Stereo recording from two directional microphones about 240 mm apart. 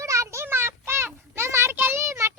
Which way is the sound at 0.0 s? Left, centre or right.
Centre.